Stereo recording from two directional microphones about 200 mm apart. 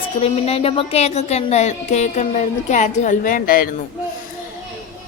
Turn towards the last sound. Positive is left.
turn(degrees=45)  # may be behind; listen again after turning